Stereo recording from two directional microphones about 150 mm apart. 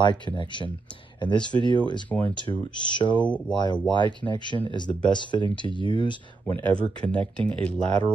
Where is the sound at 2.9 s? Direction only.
30° left (ahead or behind).